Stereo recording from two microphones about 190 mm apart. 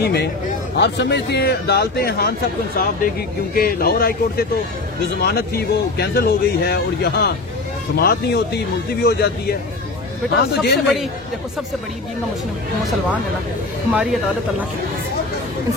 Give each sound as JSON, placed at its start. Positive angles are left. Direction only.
{"t": 0.0, "sound": "speech", "side_deg": 60}
{"t": 13.8, "sound": "speech", "side_deg": -5}